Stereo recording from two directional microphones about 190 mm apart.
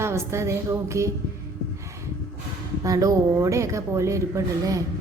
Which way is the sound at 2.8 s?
20° right (ahead or behind).